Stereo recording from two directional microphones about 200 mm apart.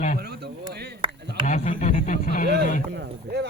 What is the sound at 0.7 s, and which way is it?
Chop, 55° right (ahead or behind).